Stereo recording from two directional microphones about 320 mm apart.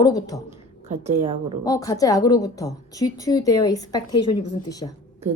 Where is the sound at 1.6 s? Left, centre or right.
Centre.